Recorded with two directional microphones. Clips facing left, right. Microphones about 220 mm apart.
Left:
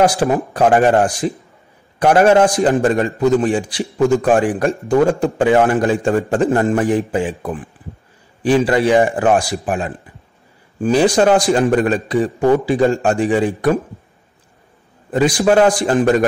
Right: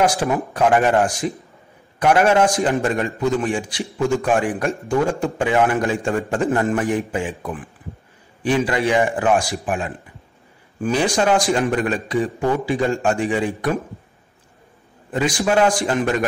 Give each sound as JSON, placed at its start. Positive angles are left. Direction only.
{"t": 0.0, "sound": "a man's voice", "side_deg": 35}
{"t": 15.1, "sound": "a man's voice", "side_deg": 40}